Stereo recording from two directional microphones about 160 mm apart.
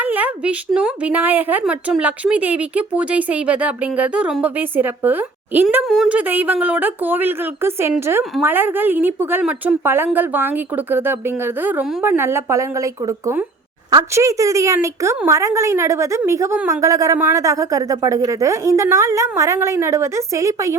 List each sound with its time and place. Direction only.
0.0 s a woman's voice: 10° right (ahead or behind)
11.6 s a woman's voice: 10° right (ahead or behind)
13.9 s a woman's voice: 20° right (ahead or behind)